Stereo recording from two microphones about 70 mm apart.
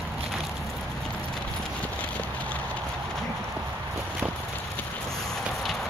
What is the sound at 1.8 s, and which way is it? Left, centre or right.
Clip-clop, centre.